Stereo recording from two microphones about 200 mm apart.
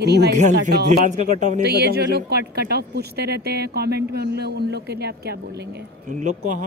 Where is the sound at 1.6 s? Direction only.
55° right (ahead or behind).